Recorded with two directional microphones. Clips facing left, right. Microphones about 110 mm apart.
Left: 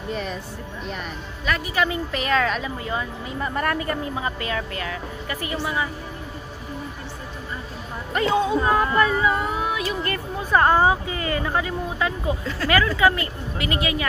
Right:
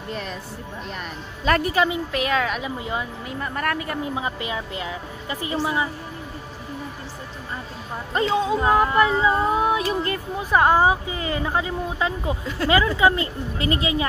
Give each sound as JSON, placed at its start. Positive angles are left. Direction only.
{"t": 0.1, "sound": "speech", "side_deg": 0}
{"t": 1.5, "sound": "speech", "side_deg": -35}
{"t": 2.1, "sound": "a woman's voice", "side_deg": -5}
{"t": 3.3, "sound": "speech", "side_deg": 5}
{"t": 4.1, "sound": "a woman's voice", "side_deg": -15}
{"t": 8.2, "sound": "speech", "side_deg": -30}
{"t": 10.1, "sound": "speech", "side_deg": -10}